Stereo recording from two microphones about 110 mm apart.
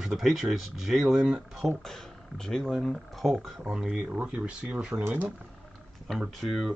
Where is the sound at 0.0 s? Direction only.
5° right (ahead or behind).